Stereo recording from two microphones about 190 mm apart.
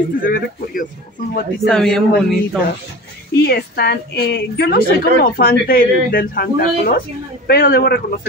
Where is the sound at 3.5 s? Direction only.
55° left (ahead or behind).